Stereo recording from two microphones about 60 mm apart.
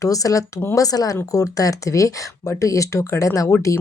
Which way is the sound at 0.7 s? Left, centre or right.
Left.